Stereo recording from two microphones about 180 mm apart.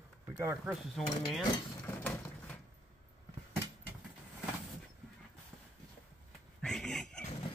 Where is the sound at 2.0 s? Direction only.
5° left (ahead or behind).